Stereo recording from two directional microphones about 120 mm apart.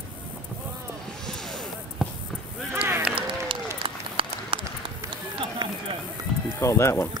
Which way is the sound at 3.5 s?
45° right (ahead or behind).